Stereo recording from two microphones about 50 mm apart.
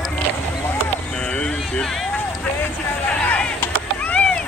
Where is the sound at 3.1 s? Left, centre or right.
Left.